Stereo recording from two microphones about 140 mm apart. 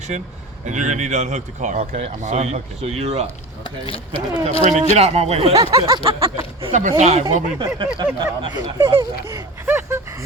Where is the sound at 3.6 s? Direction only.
35° left (ahead or behind).